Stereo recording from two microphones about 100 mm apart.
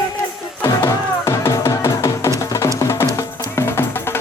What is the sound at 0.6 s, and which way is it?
Music, 25° left (ahead or behind).